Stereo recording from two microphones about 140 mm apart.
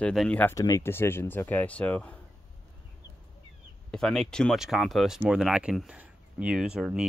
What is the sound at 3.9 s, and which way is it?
Speech, 5° left (ahead or behind).